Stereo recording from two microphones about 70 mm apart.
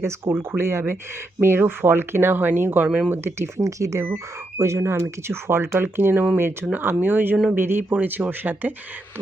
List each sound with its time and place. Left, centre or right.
0.0 s speech: right
3.6 s speech: right